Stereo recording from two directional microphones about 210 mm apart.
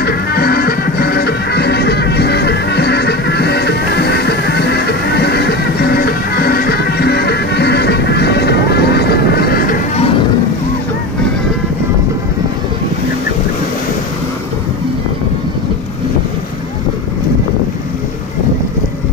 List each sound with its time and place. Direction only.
0.0 s music: 50° left (ahead or behind)